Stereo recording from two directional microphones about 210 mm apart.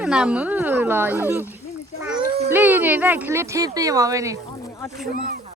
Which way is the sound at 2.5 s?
10° right (ahead or behind).